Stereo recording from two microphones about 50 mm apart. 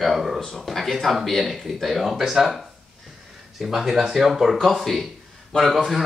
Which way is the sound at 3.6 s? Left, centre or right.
Centre.